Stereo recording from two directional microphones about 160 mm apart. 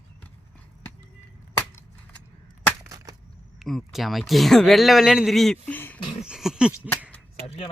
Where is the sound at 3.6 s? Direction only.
Centre (ahead or behind).